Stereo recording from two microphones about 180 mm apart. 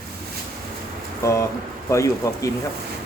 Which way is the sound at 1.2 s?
15° left (ahead or behind).